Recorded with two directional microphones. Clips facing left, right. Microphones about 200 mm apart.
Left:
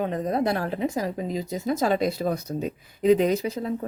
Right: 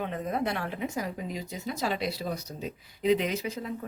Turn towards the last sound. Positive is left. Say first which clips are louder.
# left 8 dB
turn(degrees=40)  # may be behind; listen again after turning